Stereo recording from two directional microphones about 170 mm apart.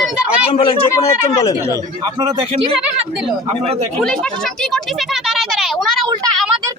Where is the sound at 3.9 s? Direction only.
5° left (ahead or behind).